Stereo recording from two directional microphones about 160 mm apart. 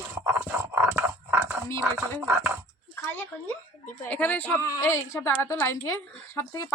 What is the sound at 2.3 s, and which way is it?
Speech, 15° right (ahead or behind).